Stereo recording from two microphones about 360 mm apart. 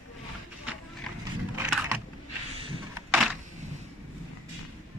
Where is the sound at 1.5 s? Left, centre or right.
Centre.